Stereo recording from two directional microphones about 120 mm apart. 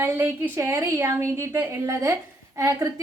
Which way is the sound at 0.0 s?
20° right (ahead or behind).